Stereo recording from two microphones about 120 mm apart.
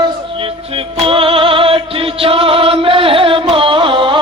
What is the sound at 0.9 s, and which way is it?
Music, 50° right (ahead or behind).